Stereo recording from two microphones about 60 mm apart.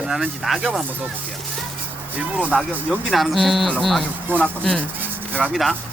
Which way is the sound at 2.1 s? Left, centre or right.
Right.